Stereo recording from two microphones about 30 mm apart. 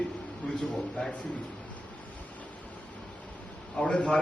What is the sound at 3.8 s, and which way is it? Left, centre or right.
Speech, left.